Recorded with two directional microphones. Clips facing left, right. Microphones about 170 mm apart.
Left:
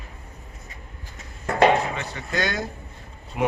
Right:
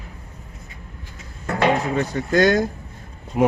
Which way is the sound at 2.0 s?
45° right (ahead or behind).